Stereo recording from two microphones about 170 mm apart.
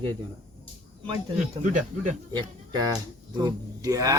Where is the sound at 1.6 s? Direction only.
45° right (ahead or behind).